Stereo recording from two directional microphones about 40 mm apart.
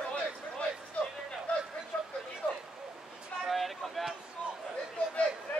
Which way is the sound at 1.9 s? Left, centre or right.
Centre.